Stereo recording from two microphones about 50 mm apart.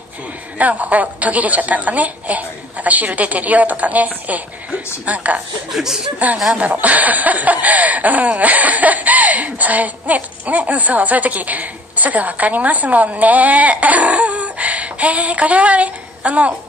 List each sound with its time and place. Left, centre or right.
0.6 s speech: right
5.7 s speech: centre
6.5 s speech: right